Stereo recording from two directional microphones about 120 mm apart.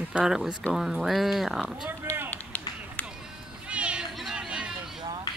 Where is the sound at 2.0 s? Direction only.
20° right (ahead or behind).